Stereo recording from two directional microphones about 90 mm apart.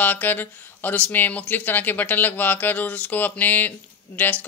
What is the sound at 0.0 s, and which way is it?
Speech, 20° left (ahead or behind).